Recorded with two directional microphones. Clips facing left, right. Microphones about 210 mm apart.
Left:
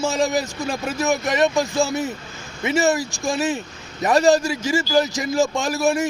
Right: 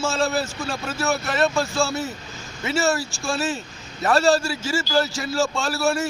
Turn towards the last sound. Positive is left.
turn(degrees=15)  # may be behind; listen again after turning